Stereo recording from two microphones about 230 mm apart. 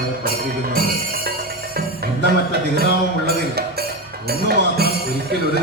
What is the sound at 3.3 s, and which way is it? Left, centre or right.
Music, right.